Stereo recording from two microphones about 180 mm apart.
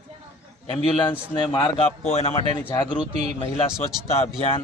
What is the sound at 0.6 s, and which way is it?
Speech, 25° left (ahead or behind).